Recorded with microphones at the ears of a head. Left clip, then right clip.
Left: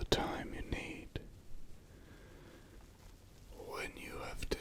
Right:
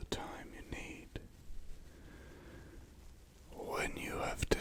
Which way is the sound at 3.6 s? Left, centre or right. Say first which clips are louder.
Right 5 dB; right.